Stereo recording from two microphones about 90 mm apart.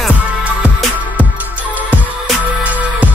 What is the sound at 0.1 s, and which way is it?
Music, 15° right (ahead or behind).